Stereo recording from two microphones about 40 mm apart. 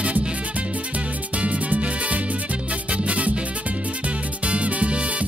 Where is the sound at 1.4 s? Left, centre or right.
Right.